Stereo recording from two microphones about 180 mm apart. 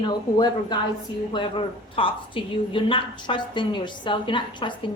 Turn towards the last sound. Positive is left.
turn(degrees=25)  # may be behind; listen again after turning